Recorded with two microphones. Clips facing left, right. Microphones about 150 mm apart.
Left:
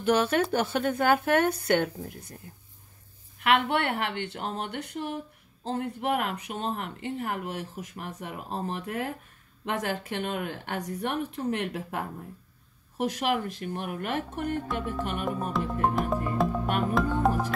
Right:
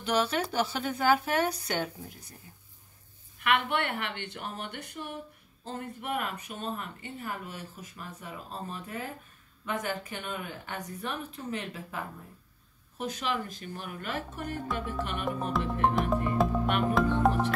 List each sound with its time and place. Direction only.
0.0 s speech: 55° left (ahead or behind)
3.3 s speech: 60° left (ahead or behind); by 9.1 s 80° left
9.7 s a woman's voice: 90° left; by 14.5 s 55° left (ahead or behind)
14.9 s music: 50° left (ahead or behind)
15.5 s music: centre (ahead or behind)